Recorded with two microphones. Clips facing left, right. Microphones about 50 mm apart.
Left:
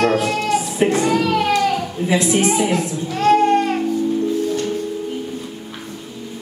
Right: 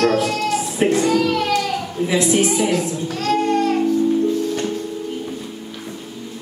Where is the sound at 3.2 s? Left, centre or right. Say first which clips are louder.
Left 4 dB; left.